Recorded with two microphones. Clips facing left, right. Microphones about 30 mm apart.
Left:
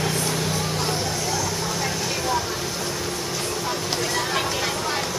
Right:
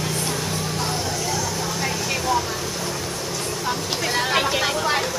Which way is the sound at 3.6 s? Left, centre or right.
Centre.